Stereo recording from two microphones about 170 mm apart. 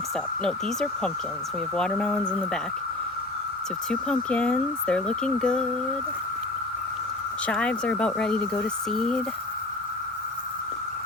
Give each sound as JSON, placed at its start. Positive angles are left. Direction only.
{"t": 0.4, "sound": "speech", "side_deg": 5}
{"t": 3.8, "sound": "speech", "side_deg": 5}
{"t": 7.4, "sound": "speech", "side_deg": 5}